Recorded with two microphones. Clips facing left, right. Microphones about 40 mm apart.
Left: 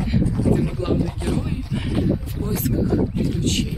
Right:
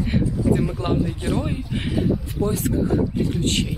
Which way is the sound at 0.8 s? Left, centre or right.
Right.